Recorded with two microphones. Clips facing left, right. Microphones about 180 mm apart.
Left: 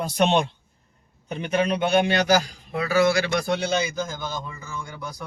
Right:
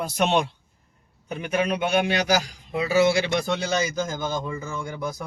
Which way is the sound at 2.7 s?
20° right (ahead or behind).